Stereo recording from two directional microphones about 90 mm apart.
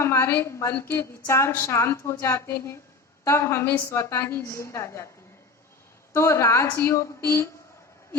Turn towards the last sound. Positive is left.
turn(degrees=30)  # may be behind; listen again after turning